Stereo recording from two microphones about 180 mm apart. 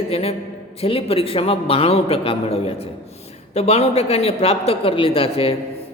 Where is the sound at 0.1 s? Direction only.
30° left (ahead or behind).